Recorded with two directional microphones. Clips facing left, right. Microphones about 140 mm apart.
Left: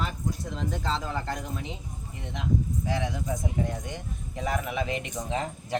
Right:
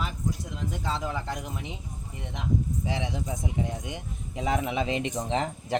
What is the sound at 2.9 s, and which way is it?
Speech, 20° right (ahead or behind).